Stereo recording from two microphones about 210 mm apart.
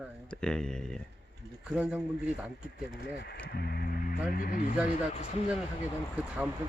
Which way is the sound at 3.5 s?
45° left (ahead or behind).